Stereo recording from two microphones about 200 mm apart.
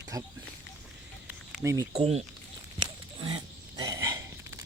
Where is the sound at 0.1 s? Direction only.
15° right (ahead or behind).